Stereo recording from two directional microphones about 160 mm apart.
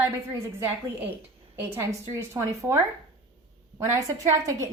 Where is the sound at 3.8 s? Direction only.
20° right (ahead or behind).